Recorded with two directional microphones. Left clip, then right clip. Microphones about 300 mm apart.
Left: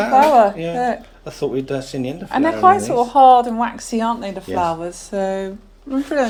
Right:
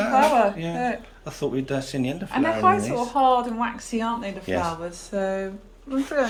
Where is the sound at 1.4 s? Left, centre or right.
Centre.